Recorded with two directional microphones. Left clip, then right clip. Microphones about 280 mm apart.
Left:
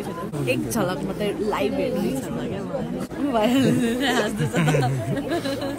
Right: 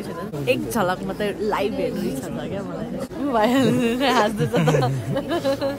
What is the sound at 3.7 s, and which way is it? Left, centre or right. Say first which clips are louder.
Music: right 3 dB; right.